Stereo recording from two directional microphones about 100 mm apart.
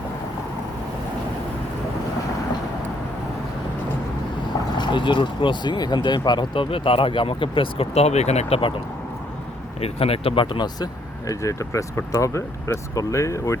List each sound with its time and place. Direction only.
4.8 s speech: 50° left (ahead or behind); by 8.7 s 75° left (ahead or behind)
9.8 s speech: 80° left
10.4 s speech: 50° left (ahead or behind)
11.3 s speech: 30° left (ahead or behind)